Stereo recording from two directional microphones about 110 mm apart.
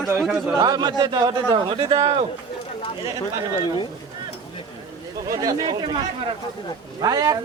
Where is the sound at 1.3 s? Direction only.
55° right (ahead or behind).